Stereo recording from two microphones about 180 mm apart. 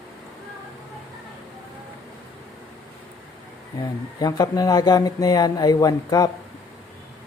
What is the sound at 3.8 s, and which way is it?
Speech, 20° left (ahead or behind).